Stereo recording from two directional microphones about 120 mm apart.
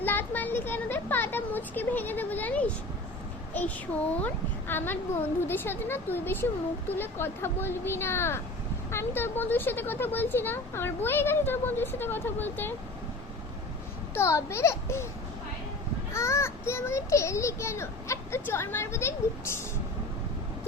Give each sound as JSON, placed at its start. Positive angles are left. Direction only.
{"t": 0.0, "sound": "a sound", "side_deg": 15}
{"t": 4.7, "sound": "a child's voice", "side_deg": 15}
{"t": 14.1, "sound": "a child's voice", "side_deg": 20}
{"t": 16.1, "sound": "a child's voice", "side_deg": 25}